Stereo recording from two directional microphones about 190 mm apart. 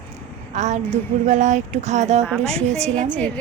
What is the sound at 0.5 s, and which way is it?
A woman's voice, 40° right (ahead or behind).